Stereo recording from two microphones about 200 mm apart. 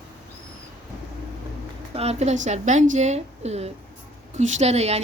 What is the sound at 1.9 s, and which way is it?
A woman's voice, 30° right (ahead or behind).